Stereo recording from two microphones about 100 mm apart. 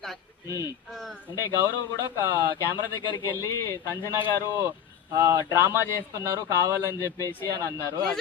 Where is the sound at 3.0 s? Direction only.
40° left (ahead or behind).